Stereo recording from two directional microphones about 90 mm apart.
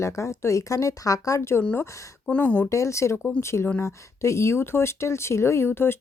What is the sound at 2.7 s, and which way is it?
Speech, 35° left (ahead or behind).